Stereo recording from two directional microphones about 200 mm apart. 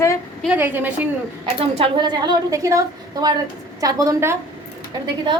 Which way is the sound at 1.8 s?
20° right (ahead or behind).